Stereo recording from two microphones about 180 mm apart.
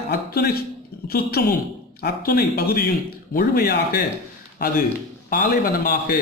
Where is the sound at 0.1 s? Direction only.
60° left (ahead or behind).